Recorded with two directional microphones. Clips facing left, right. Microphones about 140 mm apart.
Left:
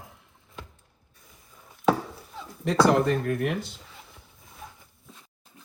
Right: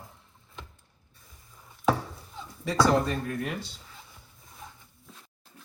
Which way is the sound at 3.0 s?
65° left (ahead or behind).